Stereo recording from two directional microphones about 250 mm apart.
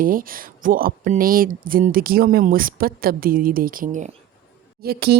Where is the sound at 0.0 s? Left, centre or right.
Right.